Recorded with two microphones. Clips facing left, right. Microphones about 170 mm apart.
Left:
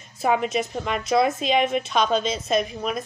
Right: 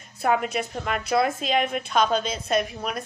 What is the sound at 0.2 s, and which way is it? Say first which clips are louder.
A woman's voice: left 2 dB; centre (ahead or behind).